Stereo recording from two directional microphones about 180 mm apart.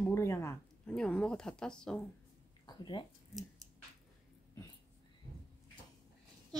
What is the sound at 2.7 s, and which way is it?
Speech, 25° left (ahead or behind).